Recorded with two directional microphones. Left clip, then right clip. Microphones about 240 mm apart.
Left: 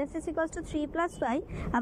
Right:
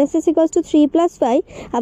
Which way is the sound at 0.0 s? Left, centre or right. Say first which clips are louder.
Right 17 dB; right.